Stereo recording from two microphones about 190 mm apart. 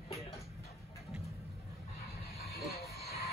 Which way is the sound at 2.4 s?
60° left (ahead or behind).